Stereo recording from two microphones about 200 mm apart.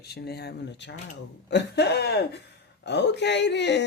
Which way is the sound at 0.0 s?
55° left (ahead or behind).